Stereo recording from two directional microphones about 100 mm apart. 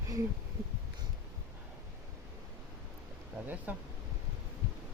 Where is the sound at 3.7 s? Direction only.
15° right (ahead or behind).